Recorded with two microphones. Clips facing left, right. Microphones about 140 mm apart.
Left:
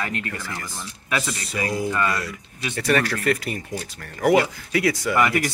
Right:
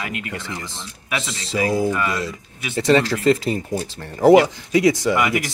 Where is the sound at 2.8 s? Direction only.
20° right (ahead or behind).